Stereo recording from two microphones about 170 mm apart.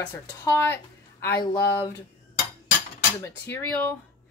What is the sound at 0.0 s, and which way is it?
A woman's voice, 10° left (ahead or behind).